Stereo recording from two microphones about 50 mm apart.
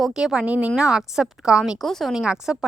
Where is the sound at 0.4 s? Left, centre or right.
Right.